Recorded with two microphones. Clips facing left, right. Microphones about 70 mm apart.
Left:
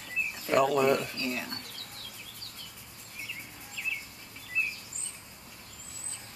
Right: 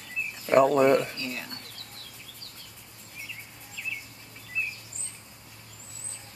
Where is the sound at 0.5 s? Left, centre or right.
Right.